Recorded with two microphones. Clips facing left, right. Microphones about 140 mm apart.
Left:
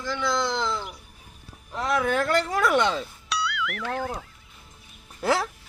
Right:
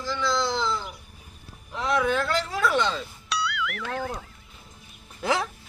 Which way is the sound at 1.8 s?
45° left (ahead or behind).